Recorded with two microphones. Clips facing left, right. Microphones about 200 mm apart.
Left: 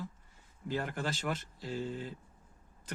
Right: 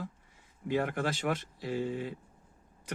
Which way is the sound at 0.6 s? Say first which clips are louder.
Right 5 dB; 60° right (ahead or behind).